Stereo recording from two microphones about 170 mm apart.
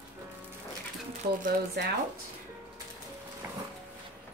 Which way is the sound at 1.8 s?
70° right (ahead or behind).